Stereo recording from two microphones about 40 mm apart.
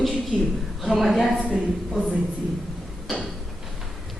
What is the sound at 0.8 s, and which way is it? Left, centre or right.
Speech, centre.